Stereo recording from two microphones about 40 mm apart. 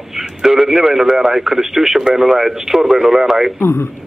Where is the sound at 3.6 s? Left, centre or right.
Left.